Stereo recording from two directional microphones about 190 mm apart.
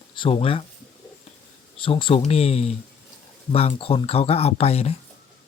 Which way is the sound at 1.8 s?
30° left (ahead or behind).